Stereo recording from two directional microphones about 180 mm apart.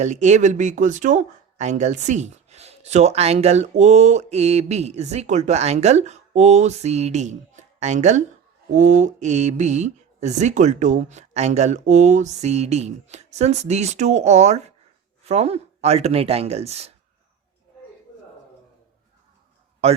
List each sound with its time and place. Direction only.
0.0 s speech: 40° right (ahead or behind)